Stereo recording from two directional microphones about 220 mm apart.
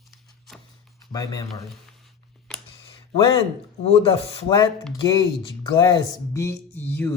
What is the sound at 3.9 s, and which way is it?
Speech, 25° left (ahead or behind).